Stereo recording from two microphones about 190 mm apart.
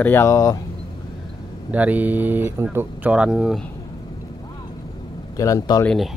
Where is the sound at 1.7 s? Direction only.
10° right (ahead or behind).